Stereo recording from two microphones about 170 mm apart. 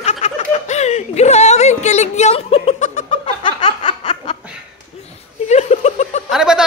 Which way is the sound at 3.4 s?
30° left (ahead or behind).